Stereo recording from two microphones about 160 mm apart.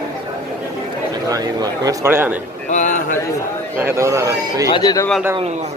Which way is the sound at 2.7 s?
50° left (ahead or behind).